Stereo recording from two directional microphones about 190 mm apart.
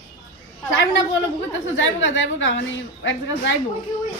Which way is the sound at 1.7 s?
80° left.